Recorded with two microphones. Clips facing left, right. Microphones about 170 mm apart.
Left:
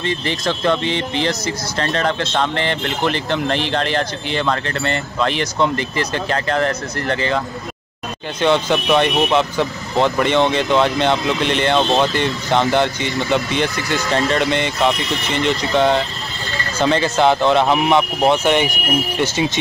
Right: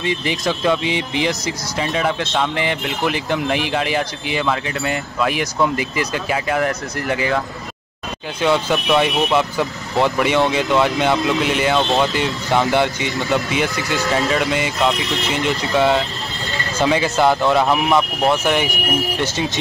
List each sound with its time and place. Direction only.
0.0 s speech: 10° right (ahead or behind)
8.4 s speech: 5° right (ahead or behind)
17.9 s speech: 20° left (ahead or behind)
18.4 s speech: centre (ahead or behind)